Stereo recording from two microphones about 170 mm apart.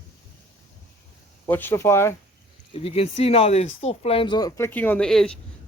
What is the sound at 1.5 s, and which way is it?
Speech, 10° left (ahead or behind).